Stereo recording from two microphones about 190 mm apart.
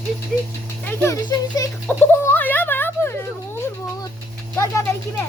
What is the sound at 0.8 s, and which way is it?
Speech, 15° left (ahead or behind).